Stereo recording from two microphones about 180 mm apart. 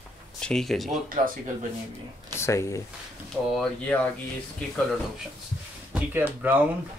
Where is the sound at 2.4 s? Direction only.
15° left (ahead or behind).